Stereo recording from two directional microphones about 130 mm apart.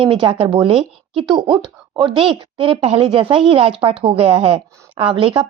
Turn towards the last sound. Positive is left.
turn(degrees=-40)  # may be behind; listen again after turning